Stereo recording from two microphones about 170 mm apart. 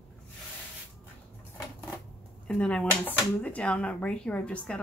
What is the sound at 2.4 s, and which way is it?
Speech, 5° left (ahead or behind).